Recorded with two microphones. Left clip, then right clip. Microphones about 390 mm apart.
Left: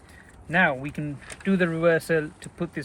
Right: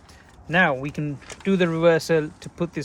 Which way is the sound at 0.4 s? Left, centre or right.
Right.